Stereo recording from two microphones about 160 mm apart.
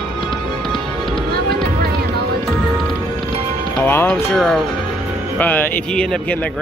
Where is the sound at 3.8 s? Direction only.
15° left (ahead or behind).